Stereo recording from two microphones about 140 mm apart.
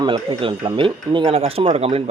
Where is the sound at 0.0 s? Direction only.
35° right (ahead or behind).